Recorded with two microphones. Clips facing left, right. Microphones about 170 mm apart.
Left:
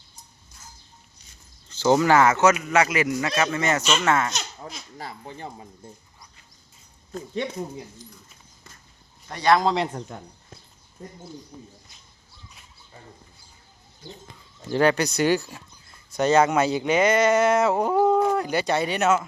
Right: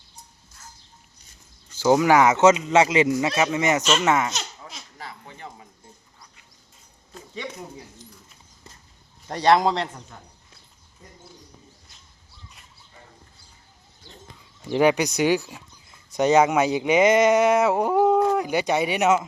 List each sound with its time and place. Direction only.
1.7 s speech: 10° right (ahead or behind)
4.6 s a sound: 40° left (ahead or behind)
9.3 s a man's voice: 30° right (ahead or behind)
11.0 s speech: 50° left (ahead or behind)
14.7 s speech: 15° right (ahead or behind)